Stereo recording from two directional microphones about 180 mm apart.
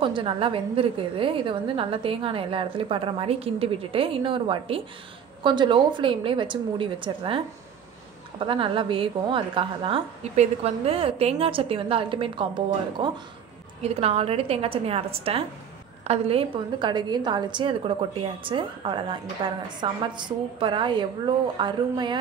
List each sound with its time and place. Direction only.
0.0 s a woman's voice: 30° right (ahead or behind)